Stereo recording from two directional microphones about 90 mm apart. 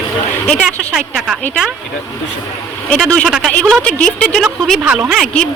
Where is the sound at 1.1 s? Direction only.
10° right (ahead or behind).